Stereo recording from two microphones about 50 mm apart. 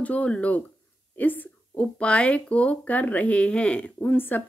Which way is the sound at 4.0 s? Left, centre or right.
Left.